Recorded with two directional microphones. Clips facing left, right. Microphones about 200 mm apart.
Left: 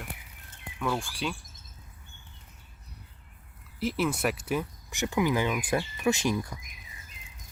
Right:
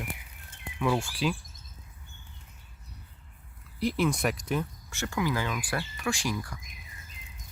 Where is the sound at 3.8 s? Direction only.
5° left (ahead or behind); by 6.5 s 20° left (ahead or behind).